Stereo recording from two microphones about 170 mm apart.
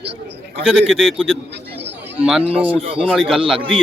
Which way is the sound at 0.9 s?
Centre (ahead or behind).